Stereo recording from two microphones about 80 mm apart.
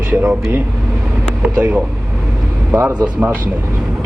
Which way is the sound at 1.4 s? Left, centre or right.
Centre.